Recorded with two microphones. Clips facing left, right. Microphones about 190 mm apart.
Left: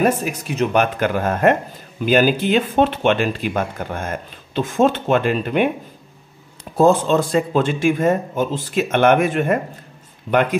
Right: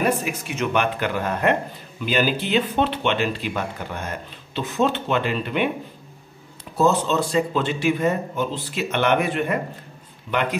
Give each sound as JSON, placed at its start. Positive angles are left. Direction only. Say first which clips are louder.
{"t": 0.0, "sound": "speech", "louder": "left 4 dB", "side_deg": 45}
{"t": 6.8, "sound": "speech", "louder": "left 5 dB", "side_deg": 50}
{"t": 10.3, "sound": "speech", "louder": "left 7 dB", "side_deg": 35}